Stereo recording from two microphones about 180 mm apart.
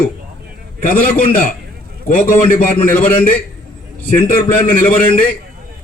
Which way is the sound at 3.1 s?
10° left (ahead or behind).